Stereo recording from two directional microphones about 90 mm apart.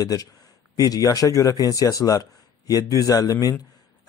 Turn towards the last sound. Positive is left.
turn(degrees=40)  # may be behind; listen again after turning